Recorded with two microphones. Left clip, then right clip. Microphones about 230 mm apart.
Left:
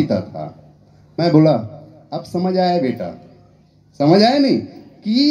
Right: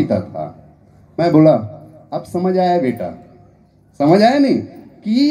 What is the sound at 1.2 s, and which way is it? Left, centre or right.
A man's voice, left.